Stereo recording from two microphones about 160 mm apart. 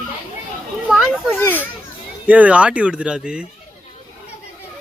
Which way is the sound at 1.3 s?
15° left (ahead or behind).